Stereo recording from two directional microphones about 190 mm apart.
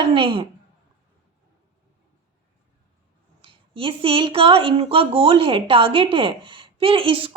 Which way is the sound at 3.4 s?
30° right (ahead or behind).